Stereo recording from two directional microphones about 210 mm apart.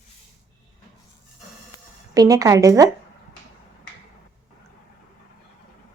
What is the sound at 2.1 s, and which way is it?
Speech, 15° right (ahead or behind).